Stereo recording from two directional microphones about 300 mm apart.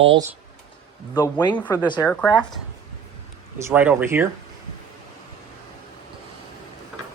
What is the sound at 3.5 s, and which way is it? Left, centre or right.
Speech, centre.